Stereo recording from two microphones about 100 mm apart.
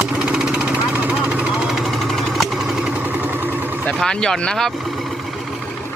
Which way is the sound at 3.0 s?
20° right (ahead or behind).